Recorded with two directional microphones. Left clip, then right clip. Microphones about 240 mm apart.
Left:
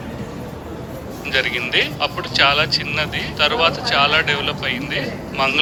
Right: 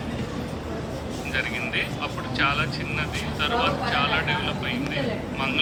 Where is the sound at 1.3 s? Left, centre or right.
Left.